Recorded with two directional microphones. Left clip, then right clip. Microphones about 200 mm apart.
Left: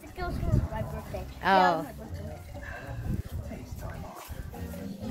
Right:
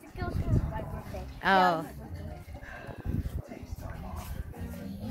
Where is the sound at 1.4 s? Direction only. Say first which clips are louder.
Left 1 dB; 30° right (ahead or behind).